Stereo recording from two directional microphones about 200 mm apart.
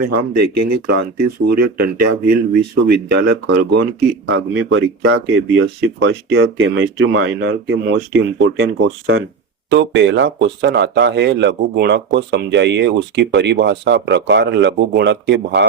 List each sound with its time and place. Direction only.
0.0 s speech: 50° right (ahead or behind)
4.3 s speech: 65° right (ahead or behind)
8.5 s speech: 80° right
9.6 s speech: 65° right (ahead or behind)